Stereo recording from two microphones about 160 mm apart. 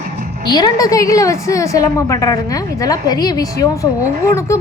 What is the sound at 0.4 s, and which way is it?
A woman's voice, 25° left (ahead or behind).